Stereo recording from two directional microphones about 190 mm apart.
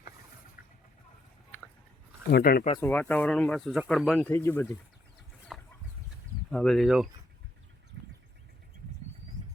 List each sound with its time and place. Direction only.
2.3 s speech: 50° left (ahead or behind)
2.7 s speech: 10° left (ahead or behind)
4.3 s speech: 15° left (ahead or behind)
5.5 s chicken: centre (ahead or behind)
6.5 s speech: 5° left (ahead or behind)